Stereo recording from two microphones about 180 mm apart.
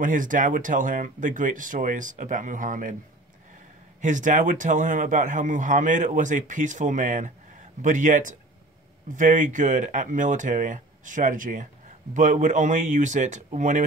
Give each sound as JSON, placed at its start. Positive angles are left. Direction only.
{"t": 0.0, "sound": "a man's voice", "side_deg": -45}
{"t": 4.0, "sound": "a man's voice", "side_deg": -45}